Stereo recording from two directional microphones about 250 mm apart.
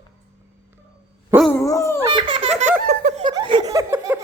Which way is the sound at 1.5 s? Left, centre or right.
Centre.